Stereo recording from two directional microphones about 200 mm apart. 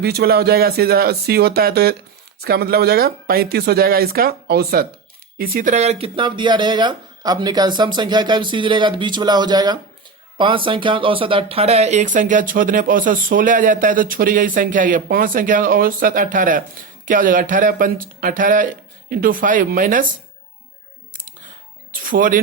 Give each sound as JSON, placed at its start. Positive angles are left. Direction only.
{"t": 0.0, "sound": "speech", "side_deg": -50}
{"t": 21.9, "sound": "music", "side_deg": -45}